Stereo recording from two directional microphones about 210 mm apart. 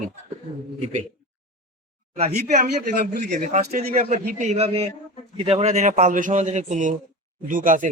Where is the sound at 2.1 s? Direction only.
35° right (ahead or behind).